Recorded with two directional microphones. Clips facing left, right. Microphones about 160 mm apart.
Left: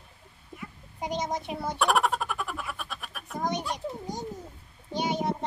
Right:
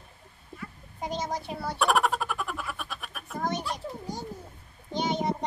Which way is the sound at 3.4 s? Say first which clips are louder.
Left 1 dB; 15° left (ahead or behind).